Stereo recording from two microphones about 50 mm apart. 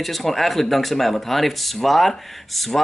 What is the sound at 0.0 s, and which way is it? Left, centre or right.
A man's voice, centre.